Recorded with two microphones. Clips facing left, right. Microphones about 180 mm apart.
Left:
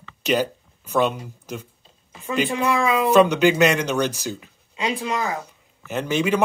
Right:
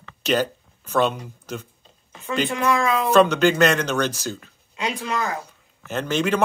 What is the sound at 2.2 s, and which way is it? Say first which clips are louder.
Speech: even; 10° left (ahead or behind).